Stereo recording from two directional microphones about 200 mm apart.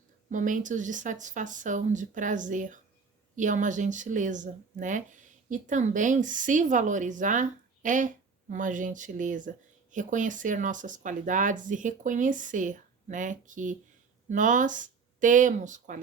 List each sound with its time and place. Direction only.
0.3 s a woman's voice: 40° right (ahead or behind)